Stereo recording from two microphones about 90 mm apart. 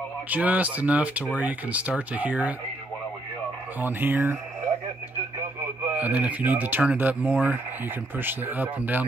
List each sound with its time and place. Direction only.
0.3 s speech: 15° right (ahead or behind)
3.8 s speech: 20° right (ahead or behind)
5.9 s speech: 20° right (ahead or behind)